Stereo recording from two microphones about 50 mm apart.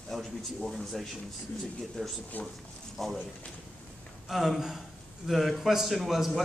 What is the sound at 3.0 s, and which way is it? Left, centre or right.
Speech, centre.